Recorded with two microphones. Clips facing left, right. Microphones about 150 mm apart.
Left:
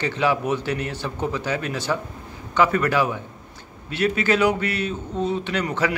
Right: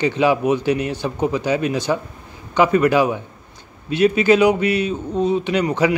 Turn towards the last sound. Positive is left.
turn(degrees=-15)  # may be behind; listen again after turning